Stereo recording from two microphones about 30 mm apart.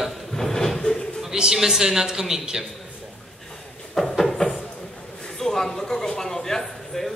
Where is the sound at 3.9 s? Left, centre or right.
Centre.